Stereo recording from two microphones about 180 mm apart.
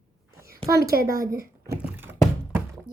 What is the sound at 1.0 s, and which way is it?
Child singing, 15° right (ahead or behind).